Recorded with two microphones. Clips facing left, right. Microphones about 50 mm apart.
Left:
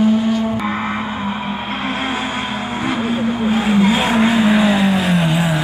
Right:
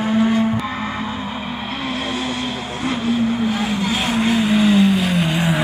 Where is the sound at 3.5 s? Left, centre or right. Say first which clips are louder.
Left 6 dB; centre.